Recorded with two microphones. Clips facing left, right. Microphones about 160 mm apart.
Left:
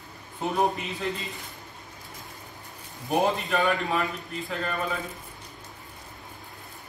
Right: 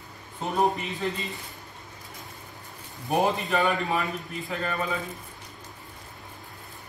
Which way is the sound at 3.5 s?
Centre (ahead or behind).